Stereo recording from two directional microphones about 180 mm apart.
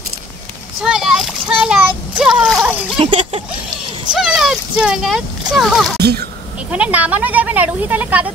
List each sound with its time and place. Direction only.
0.8 s splash: 5° right (ahead or behind)
3.0 s a sound: 30° right (ahead or behind)
4.1 s speech: centre (ahead or behind)
5.9 s speech: 60° right (ahead or behind)
6.7 s speech: 5° right (ahead or behind)